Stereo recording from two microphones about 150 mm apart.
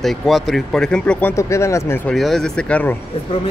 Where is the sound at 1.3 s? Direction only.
20° left (ahead or behind).